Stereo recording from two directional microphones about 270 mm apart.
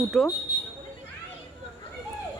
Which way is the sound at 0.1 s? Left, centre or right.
Centre.